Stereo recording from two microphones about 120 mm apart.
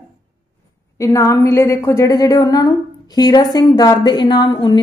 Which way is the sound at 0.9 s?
25° left (ahead or behind).